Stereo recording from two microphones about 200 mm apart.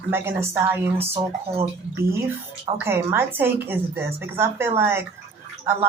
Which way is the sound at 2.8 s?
10° right (ahead or behind).